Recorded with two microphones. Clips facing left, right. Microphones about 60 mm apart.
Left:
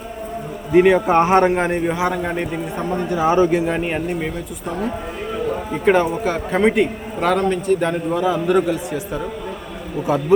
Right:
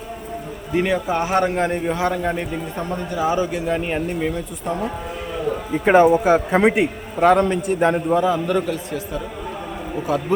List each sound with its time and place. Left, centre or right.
0.7 s a man's voice: left
1.0 s a man's voice: left; by 2.6 s centre
2.7 s a man's voice: left
3.7 s a man's voice: centre
5.8 s a man's voice: centre
8.2 s a man's voice: centre